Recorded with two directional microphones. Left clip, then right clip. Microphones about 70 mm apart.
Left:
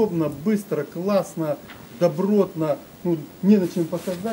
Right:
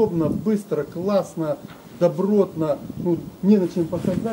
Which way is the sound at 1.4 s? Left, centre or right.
Centre.